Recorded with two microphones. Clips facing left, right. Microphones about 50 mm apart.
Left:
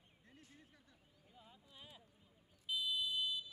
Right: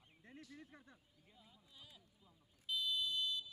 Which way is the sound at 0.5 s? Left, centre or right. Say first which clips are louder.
Right 7 dB; right.